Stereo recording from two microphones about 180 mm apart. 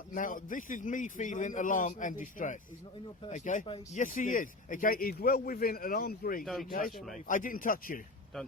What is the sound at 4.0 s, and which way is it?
A man's voice, 45° left (ahead or behind).